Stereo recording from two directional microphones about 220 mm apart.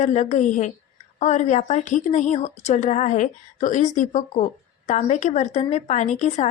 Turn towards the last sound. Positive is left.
turn(degrees=30)  # may be behind; listen again after turning